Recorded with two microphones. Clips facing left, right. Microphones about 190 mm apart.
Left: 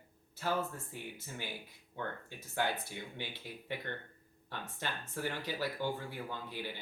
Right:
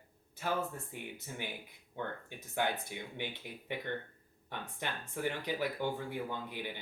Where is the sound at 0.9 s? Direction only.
20° right (ahead or behind).